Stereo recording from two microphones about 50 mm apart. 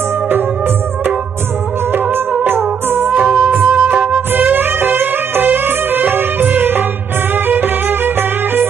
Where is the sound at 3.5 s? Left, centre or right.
Right.